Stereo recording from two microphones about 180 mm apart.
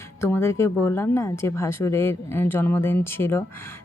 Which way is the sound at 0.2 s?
15° left (ahead or behind).